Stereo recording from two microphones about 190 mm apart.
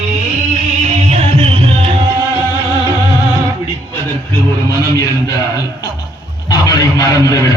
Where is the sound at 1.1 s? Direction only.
30° right (ahead or behind).